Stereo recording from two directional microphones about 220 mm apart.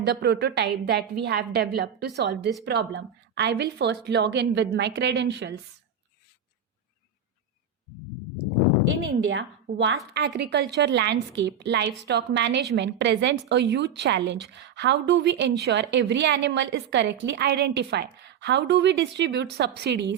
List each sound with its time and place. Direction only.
0.0 s a woman's voice: 50° right (ahead or behind)
9.2 s a woman's voice: 55° right (ahead or behind)